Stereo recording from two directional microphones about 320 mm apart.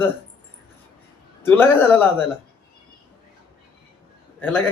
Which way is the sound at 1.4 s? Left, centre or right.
Centre.